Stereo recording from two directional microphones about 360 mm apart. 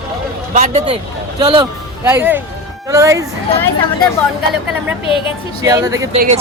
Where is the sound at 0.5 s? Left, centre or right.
Centre.